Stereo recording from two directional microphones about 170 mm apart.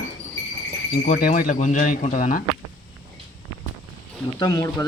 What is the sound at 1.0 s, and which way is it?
Speech, 50° left (ahead or behind).